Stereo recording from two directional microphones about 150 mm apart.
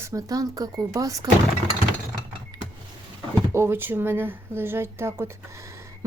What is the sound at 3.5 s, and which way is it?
Speech, 15° right (ahead or behind).